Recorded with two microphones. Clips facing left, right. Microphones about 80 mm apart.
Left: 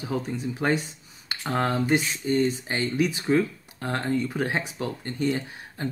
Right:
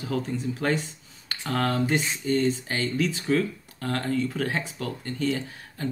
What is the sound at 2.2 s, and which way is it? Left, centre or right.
Speech, centre.